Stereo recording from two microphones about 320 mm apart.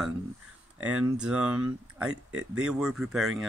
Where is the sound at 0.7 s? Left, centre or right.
Right.